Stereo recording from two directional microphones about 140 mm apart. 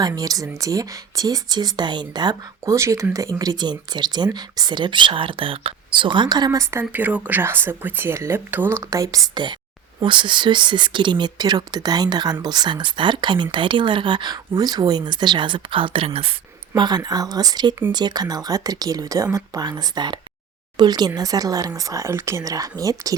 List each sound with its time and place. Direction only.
0.0 s speech: 25° right (ahead or behind); by 16.3 s 45° right (ahead or behind)
16.7 s speech: 30° right (ahead or behind)